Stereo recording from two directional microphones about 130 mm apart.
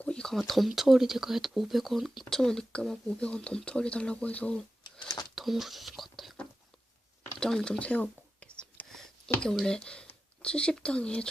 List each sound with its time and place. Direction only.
0.0 s speech: 5° left (ahead or behind)
4.9 s a sound: 35° left (ahead or behind)
5.3 s whispering: centre (ahead or behind)
9.4 s speech: 5° left (ahead or behind)